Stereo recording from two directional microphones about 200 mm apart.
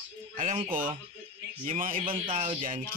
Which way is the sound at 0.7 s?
45° right (ahead or behind).